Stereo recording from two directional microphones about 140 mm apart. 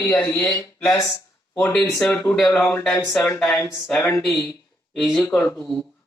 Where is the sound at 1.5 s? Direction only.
10° left (ahead or behind).